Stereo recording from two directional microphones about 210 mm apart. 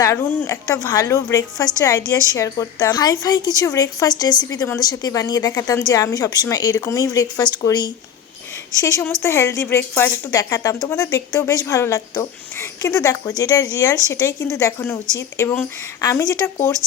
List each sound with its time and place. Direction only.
0.0 s a woman's voice: 10° left (ahead or behind)